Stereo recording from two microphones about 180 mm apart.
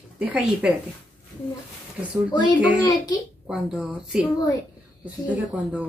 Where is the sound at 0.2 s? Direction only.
10° right (ahead or behind).